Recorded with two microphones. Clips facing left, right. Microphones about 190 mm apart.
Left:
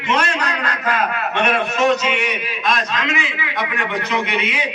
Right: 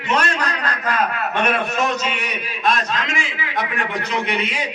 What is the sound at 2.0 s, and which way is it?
A man's voice, 40° right (ahead or behind).